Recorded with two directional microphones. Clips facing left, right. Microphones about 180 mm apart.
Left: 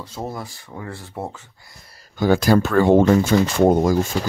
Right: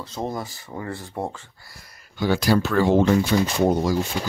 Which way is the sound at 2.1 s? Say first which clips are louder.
Left 4 dB; 45° left (ahead or behind).